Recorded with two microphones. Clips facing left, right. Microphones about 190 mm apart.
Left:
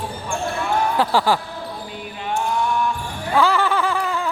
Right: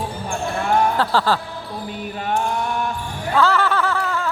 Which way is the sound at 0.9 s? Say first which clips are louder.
Left 1 dB; 15° left (ahead or behind).